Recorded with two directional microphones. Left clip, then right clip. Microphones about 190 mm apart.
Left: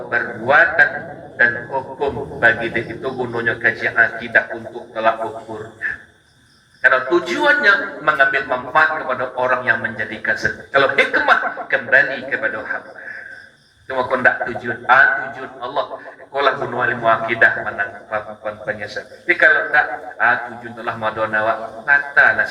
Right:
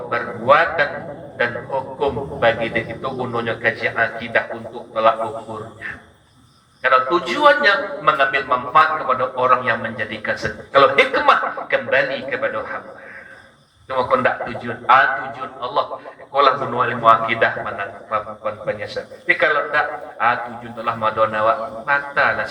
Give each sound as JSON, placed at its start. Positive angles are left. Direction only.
{"t": 0.1, "sound": "speech", "side_deg": 20}
{"t": 2.0, "sound": "a man's voice", "side_deg": 20}
{"t": 6.8, "sound": "a man's voice", "side_deg": 20}
{"t": 13.8, "sound": "a man's voice", "side_deg": 15}